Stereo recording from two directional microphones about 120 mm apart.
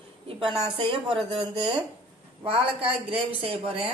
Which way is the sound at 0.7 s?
50° right (ahead or behind).